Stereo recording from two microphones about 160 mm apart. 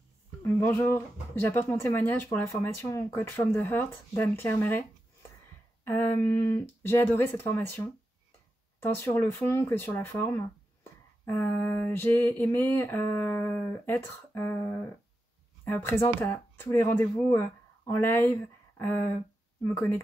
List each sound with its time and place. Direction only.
0.4 s speech: 15° left (ahead or behind)
5.9 s speech: 10° left (ahead or behind)